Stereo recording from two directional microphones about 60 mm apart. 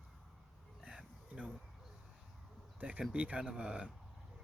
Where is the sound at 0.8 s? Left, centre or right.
Centre.